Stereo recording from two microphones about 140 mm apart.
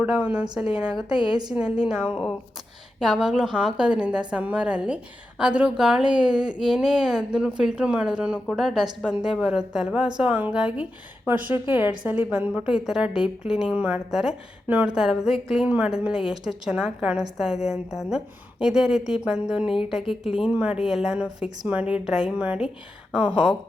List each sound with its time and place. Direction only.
0.0 s a woman's voice: 10° right (ahead or behind)
1.1 s a woman's voice: 35° left (ahead or behind)
1.5 s a woman's voice: 5° right (ahead or behind)